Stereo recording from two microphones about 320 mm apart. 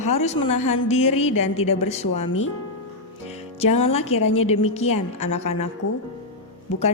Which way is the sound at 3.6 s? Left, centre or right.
Centre.